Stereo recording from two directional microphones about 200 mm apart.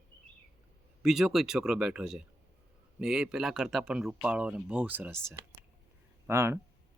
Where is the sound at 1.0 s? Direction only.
Centre (ahead or behind).